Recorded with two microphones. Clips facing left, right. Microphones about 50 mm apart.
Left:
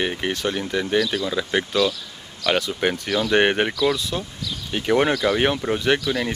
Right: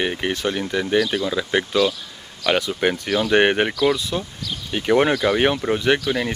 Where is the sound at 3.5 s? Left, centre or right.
Centre.